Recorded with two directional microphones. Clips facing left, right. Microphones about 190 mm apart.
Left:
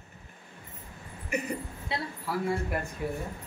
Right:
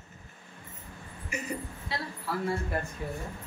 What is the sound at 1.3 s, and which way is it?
Speech, 60° left (ahead or behind).